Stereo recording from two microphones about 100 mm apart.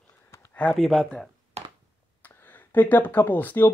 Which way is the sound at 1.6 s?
90° right.